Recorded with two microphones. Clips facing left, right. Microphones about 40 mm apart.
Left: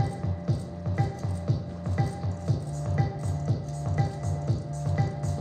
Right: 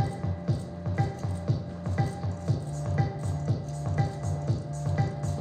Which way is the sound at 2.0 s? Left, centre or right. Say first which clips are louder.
Even; right.